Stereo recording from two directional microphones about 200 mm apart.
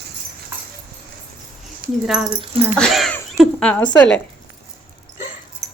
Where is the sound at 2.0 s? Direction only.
5° right (ahead or behind).